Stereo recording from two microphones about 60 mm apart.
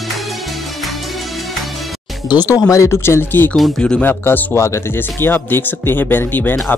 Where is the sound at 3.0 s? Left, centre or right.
Left.